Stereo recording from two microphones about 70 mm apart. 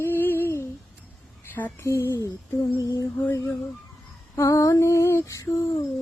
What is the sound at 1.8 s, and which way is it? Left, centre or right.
Lullaby, left.